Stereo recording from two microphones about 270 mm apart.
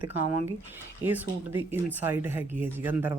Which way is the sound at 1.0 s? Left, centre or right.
Centre.